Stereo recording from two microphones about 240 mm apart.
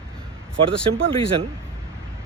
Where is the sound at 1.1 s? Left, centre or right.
Right.